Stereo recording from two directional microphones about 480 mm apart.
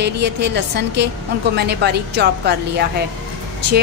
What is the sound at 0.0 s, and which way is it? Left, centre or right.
Speech, right.